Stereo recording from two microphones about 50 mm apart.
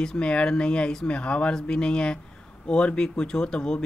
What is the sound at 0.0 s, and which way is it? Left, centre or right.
Speech, centre.